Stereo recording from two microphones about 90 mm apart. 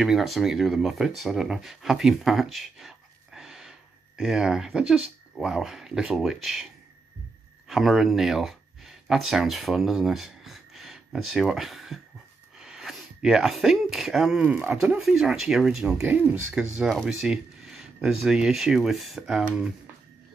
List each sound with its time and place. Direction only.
0.0 s speech: centre (ahead or behind)
16.0 s speech: 20° right (ahead or behind)
17.0 s speech: 5° right (ahead or behind)